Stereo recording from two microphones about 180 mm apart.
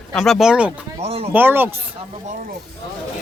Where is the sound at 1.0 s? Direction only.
35° right (ahead or behind).